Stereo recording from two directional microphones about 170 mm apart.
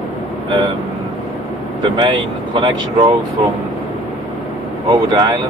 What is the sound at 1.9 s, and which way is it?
Speech, 25° right (ahead or behind).